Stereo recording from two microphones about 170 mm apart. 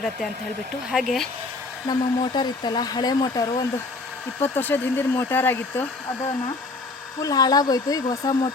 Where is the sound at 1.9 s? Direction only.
25° left (ahead or behind).